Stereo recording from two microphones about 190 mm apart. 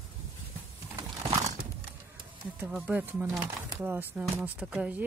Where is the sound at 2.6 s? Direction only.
10° right (ahead or behind).